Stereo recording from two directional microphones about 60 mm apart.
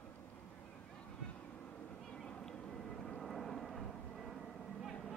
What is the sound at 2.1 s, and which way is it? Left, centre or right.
Vehicle, centre.